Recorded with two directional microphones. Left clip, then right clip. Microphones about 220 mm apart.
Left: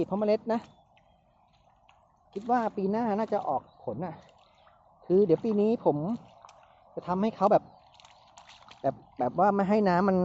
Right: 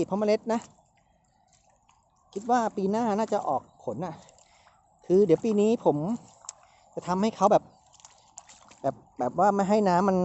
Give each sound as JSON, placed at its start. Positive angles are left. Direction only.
{"t": 0.0, "sound": "speech", "side_deg": -15}
{"t": 2.3, "sound": "speech", "side_deg": -15}
{"t": 6.1, "sound": "a sound", "side_deg": -20}
{"t": 8.4, "sound": "speech", "side_deg": -10}